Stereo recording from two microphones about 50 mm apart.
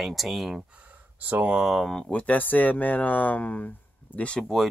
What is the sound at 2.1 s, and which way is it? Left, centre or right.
Speech, left.